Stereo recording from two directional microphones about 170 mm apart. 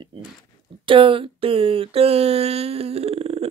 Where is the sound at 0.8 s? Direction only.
30° right (ahead or behind).